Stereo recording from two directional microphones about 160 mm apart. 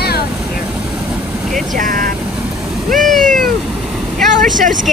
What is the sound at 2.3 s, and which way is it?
Cat, centre (ahead or behind).